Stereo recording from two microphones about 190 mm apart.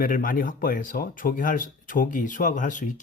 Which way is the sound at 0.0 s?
45° left (ahead or behind).